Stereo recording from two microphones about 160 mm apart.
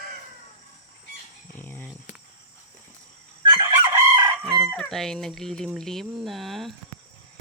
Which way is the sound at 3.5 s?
25° right (ahead or behind).